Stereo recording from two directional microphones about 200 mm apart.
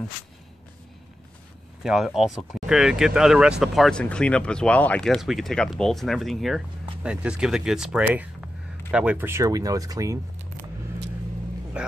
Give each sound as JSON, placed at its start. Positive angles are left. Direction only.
{"t": 1.8, "sound": "speech", "side_deg": 0}
{"t": 11.7, "sound": "speech", "side_deg": -5}